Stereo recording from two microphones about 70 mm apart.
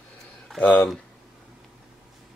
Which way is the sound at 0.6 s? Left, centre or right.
Centre.